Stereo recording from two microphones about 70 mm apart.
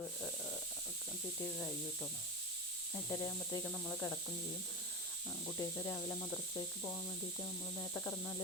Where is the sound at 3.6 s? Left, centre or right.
Left.